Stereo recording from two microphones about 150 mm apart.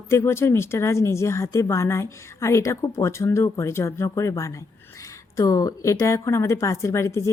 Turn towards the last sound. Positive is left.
turn(degrees=20)  # may be behind; listen again after turning